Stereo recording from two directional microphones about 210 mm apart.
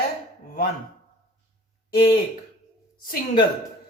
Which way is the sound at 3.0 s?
45° left (ahead or behind).